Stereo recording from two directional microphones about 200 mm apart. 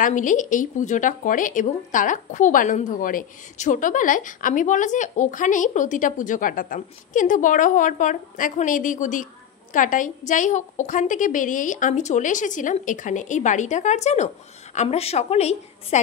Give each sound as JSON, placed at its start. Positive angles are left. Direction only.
{"t": 0.0, "sound": "speech", "side_deg": 40}